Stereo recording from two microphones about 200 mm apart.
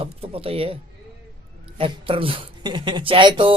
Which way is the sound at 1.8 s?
25° right (ahead or behind).